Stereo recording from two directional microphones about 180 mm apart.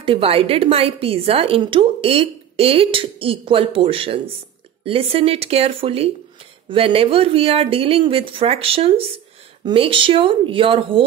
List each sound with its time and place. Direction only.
0.0 s a woman's voice: 30° right (ahead or behind)